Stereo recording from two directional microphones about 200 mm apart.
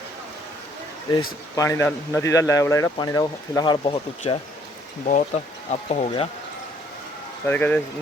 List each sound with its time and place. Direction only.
1.5 s speech: 15° left (ahead or behind); by 6.2 s 30° left (ahead or behind)
7.4 s speech: 10° left (ahead or behind)